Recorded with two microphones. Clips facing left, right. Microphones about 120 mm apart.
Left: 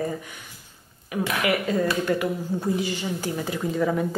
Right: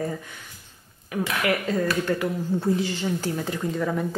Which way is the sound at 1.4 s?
10° left (ahead or behind).